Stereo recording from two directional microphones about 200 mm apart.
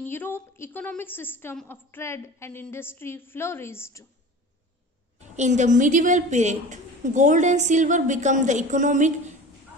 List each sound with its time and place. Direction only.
0.0 s a woman's voice: 10° left (ahead or behind)
5.3 s a woman's voice: 35° right (ahead or behind)